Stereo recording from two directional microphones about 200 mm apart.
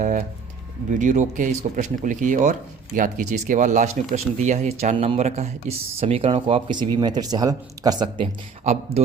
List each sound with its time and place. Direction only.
0.0 s speech: 40° right (ahead or behind); by 8.1 s 20° right (ahead or behind)
8.2 s speech: 30° right (ahead or behind)